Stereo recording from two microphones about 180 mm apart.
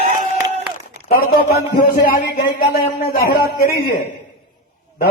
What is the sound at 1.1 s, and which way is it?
A man's voice, 55° left (ahead or behind).